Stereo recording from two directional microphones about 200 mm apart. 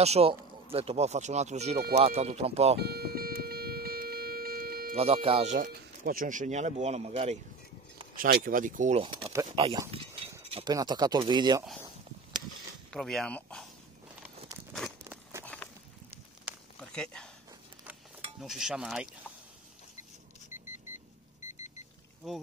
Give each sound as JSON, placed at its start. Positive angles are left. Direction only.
{"t": 0.0, "sound": "speech", "side_deg": -30}
{"t": 2.8, "sound": "music", "side_deg": -50}
{"t": 4.9, "sound": "speech", "side_deg": -30}
{"t": 5.7, "sound": "speech", "side_deg": -45}
{"t": 8.2, "sound": "speech", "side_deg": -45}
{"t": 9.8, "sound": "a sound", "side_deg": -30}
{"t": 10.5, "sound": "speech", "side_deg": -20}
{"t": 12.9, "sound": "speech", "side_deg": 5}
{"t": 14.2, "sound": "a sound", "side_deg": 0}
{"t": 16.5, "sound": "a sound", "side_deg": -10}
{"t": 16.9, "sound": "a sound", "side_deg": 5}
{"t": 18.4, "sound": "speech", "side_deg": 0}
{"t": 22.2, "sound": "speech", "side_deg": 0}